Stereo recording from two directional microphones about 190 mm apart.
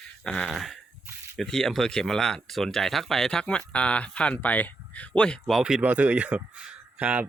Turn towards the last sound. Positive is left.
turn(degrees=-5)  # may be behind; listen again after turning